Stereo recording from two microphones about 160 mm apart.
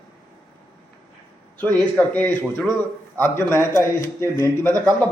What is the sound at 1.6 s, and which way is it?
A man's voice, 10° left (ahead or behind).